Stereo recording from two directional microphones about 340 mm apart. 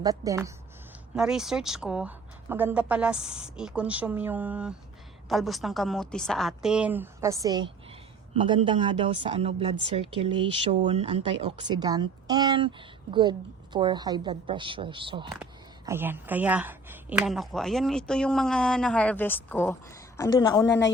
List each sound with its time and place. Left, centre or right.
0.0 s a woman's voice: centre
13.7 s a woman's voice: centre
20.7 s speech: left